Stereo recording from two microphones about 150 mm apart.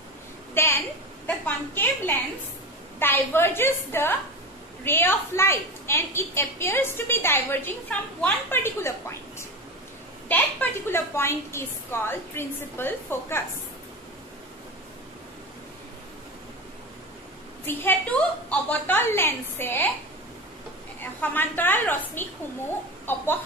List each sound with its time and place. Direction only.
0.6 s a sound: 15° left (ahead or behind)
1.2 s a woman's voice: 10° left (ahead or behind)
17.6 s a woman's voice: 10° left (ahead or behind)
21.0 s a woman's voice: 10° left (ahead or behind)